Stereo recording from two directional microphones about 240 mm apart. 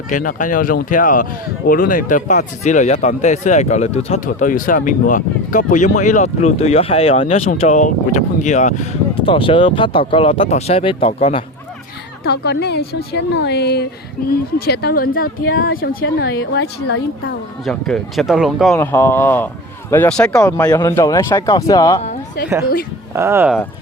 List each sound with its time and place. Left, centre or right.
0.1 s speech: left
12.2 s speech: left
17.7 s speech: centre
18.8 s speech: centre
23.1 s speech: centre